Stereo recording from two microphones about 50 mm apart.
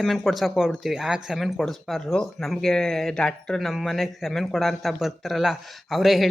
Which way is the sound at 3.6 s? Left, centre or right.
Centre.